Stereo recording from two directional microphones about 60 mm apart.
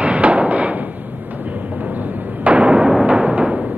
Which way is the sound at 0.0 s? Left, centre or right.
Right.